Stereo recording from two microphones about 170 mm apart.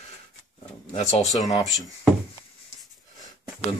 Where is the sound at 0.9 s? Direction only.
40° left (ahead or behind).